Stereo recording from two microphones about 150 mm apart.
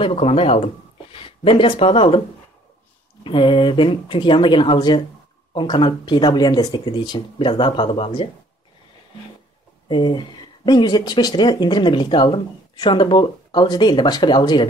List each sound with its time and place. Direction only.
0.0 s speech: 45° left (ahead or behind)
3.3 s speech: 35° left (ahead or behind)
9.8 s speech: 30° left (ahead or behind)